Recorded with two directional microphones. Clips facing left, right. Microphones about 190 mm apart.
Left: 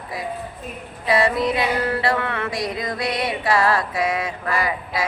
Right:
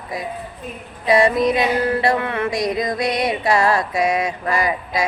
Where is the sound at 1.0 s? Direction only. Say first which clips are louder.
Right 4 dB; 15° right (ahead or behind).